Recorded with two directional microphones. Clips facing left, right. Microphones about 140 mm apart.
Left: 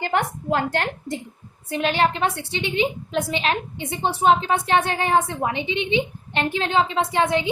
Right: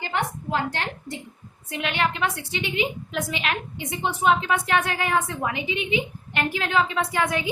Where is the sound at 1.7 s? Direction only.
35° left (ahead or behind).